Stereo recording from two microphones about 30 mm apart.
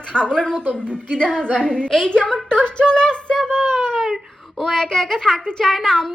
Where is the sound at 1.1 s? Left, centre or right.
Left.